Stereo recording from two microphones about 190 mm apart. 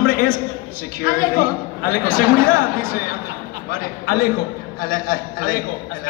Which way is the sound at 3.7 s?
50° left (ahead or behind).